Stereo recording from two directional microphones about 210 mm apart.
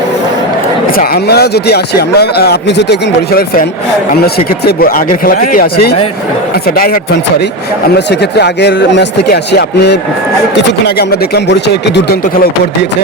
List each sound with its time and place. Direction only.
0.9 s a man's voice: 50° left (ahead or behind)